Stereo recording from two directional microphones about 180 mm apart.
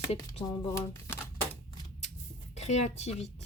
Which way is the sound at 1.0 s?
15° left (ahead or behind).